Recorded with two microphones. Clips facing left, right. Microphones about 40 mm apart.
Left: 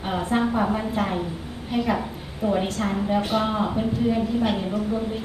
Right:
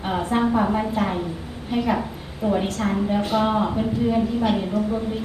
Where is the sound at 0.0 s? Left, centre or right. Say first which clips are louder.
Right 2 dB; centre.